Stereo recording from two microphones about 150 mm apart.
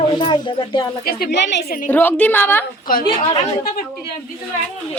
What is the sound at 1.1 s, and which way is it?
Speech, 90° left.